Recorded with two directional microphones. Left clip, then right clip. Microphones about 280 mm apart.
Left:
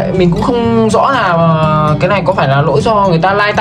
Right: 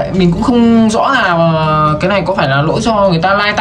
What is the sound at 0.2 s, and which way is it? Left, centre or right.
Speech, centre.